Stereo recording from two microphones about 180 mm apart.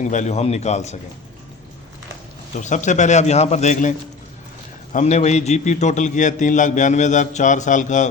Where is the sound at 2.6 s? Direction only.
45° left (ahead or behind).